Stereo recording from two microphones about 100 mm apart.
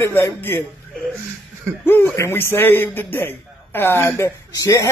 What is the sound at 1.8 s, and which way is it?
Speech, 20° left (ahead or behind).